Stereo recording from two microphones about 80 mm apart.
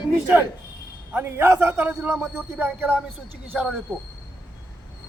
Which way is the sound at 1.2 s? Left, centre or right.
Right.